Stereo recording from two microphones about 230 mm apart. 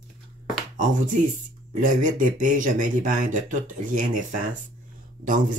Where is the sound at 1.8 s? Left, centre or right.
Right.